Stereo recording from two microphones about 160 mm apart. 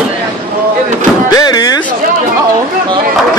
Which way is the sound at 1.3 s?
25° left (ahead or behind).